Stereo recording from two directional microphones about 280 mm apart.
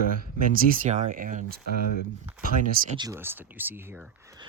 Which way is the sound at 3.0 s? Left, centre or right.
Centre.